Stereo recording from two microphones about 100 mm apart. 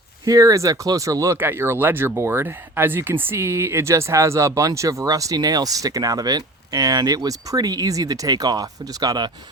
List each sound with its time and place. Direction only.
0.3 s speech: 35° right (ahead or behind)
1.4 s speech: 20° right (ahead or behind); by 9.3 s 45° right (ahead or behind)